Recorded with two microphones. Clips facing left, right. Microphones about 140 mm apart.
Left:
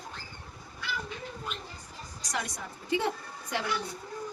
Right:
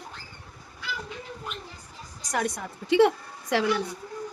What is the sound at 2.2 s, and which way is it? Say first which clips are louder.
A woman's voice: right 7 dB; 55° right (ahead or behind).